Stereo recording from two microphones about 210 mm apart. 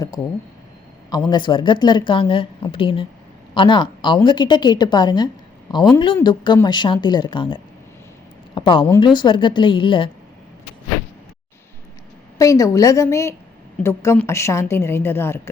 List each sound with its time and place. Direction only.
1.1 s a woman's voice: 20° left (ahead or behind)
12.4 s a woman's voice: 15° left (ahead or behind)